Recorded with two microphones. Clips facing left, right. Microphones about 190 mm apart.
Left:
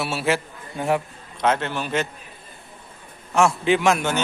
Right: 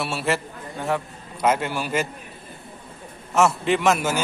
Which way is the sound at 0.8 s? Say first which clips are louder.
Left 3 dB; 15° left (ahead or behind).